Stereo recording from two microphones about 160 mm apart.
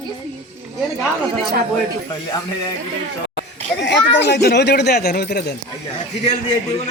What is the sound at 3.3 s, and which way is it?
Speech, 90° left.